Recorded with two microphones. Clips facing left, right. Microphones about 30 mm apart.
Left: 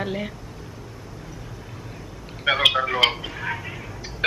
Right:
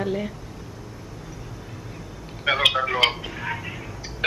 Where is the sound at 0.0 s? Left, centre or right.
Centre.